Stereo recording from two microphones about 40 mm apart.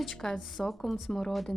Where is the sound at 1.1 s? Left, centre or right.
Centre.